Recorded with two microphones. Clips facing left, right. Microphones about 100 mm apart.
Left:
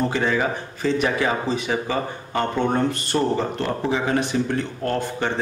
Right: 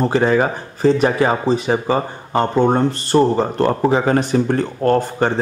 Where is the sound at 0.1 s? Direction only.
40° right (ahead or behind).